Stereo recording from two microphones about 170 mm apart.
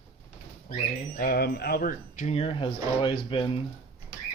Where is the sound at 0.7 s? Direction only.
60° left (ahead or behind); by 3.6 s 30° left (ahead or behind).